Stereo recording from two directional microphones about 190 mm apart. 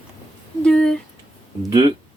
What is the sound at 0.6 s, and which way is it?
Speech, 5° left (ahead or behind).